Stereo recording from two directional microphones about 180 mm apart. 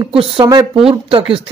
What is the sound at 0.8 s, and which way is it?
Speech, 30° right (ahead or behind).